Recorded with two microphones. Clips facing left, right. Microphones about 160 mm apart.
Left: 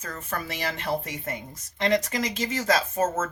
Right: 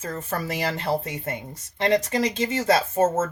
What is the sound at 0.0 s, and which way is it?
Speech, 30° right (ahead or behind).